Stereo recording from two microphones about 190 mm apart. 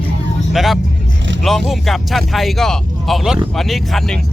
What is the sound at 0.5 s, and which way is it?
Speech, centre (ahead or behind).